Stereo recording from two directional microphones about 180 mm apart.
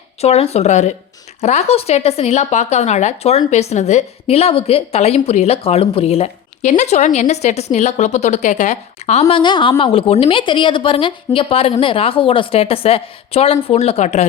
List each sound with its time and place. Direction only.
0.2 s speech: 35° left (ahead or behind)
9.4 s speech: 25° left (ahead or behind)